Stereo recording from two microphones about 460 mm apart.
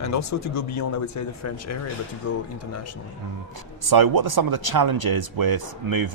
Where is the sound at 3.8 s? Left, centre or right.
Right.